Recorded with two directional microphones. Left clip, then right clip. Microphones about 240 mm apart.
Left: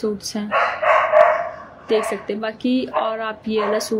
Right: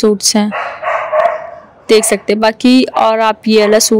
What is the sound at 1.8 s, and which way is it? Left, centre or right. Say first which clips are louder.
A woman's voice: right 10 dB; right.